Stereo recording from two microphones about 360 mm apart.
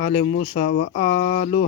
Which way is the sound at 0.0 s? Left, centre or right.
Centre.